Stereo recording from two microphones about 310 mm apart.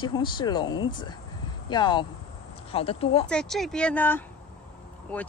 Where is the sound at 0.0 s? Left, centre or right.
Centre.